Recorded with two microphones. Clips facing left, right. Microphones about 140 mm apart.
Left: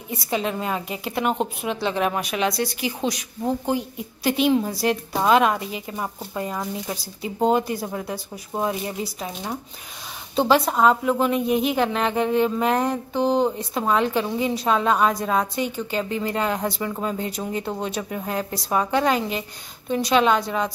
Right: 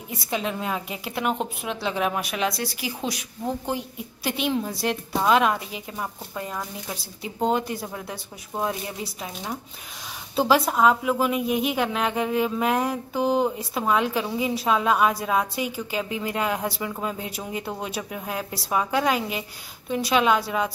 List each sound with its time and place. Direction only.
0.1 s a woman's voice: centre (ahead or behind)
10.3 s a woman's voice: centre (ahead or behind)